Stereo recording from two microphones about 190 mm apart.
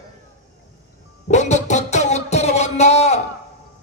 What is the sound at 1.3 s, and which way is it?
Music, 35° left (ahead or behind).